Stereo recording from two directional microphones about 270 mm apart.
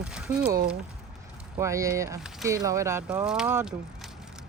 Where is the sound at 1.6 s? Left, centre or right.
Centre.